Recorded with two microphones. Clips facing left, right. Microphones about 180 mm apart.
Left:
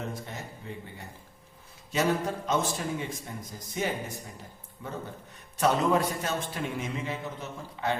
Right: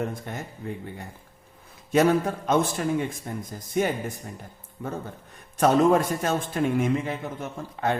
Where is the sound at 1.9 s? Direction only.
55° right (ahead or behind).